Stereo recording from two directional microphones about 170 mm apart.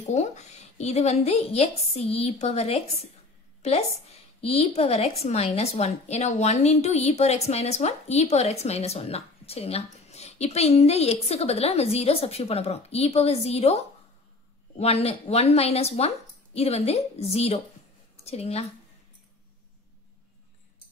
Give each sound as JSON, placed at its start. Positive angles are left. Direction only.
{"t": 0.0, "sound": "a woman's voice", "side_deg": 40}